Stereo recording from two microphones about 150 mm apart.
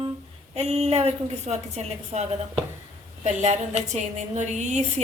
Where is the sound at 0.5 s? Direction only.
45° right (ahead or behind).